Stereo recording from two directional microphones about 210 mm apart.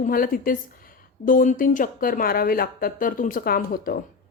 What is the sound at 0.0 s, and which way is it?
A woman's voice, 40° left (ahead or behind).